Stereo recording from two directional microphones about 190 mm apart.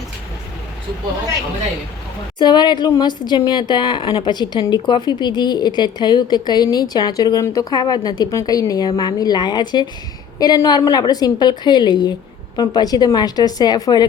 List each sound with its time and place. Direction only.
2.4 s speech: 25° left (ahead or behind)